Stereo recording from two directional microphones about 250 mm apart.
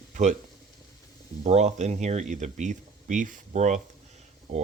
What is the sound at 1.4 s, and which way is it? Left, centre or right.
Speech, right.